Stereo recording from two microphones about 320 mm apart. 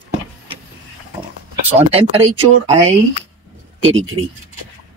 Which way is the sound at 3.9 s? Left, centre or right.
Right.